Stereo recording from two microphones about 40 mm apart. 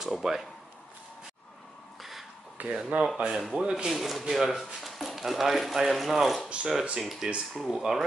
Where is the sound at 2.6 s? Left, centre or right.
Right.